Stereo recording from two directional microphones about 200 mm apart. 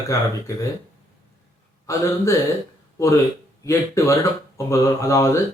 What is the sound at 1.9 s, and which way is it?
Speech, 15° left (ahead or behind).